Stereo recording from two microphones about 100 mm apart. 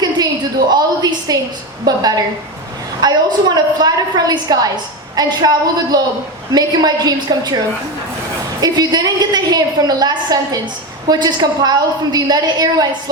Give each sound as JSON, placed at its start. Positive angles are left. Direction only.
{"t": 0.7, "sound": "a woman's voice", "side_deg": -45}
{"t": 8.6, "sound": "a woman's voice", "side_deg": -40}